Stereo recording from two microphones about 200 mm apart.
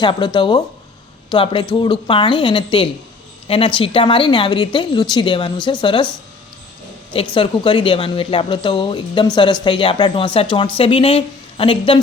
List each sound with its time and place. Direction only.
0.0 s a woman's voice: 25° left (ahead or behind)
7.1 s a woman's voice: 25° left (ahead or behind)